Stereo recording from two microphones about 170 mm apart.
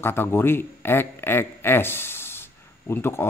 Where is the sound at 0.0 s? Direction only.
15° left (ahead or behind).